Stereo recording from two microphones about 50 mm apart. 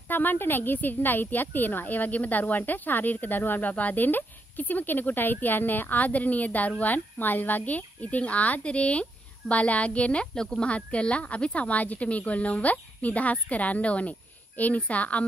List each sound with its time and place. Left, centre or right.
0.1 s speech: left
10.3 s speech: centre